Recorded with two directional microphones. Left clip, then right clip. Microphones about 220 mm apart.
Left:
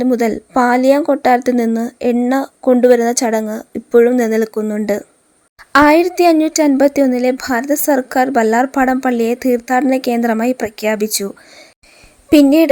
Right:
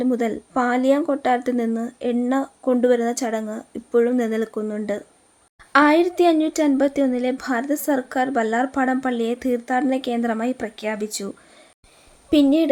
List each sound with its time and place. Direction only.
0.0 s a woman's voice: 30° left (ahead or behind)